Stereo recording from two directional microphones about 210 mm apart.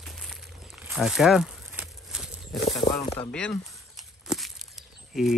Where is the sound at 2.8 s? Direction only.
30° left (ahead or behind).